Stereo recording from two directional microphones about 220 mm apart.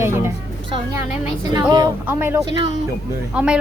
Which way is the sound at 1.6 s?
20° right (ahead or behind).